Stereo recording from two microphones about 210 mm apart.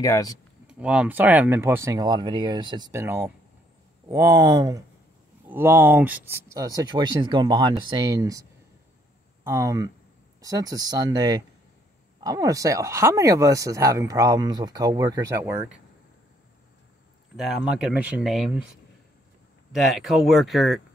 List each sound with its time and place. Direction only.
0.0 s speech: 15° left (ahead or behind)
0.7 s speech: 5° right (ahead or behind)
17.4 s speech: 5° right (ahead or behind)
19.7 s speech: centre (ahead or behind)